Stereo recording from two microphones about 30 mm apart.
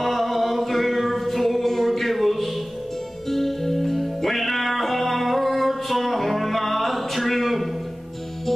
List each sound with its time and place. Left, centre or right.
0.0 s music: centre